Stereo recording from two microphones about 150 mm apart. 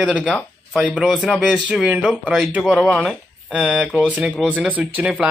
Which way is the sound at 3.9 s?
10° left (ahead or behind).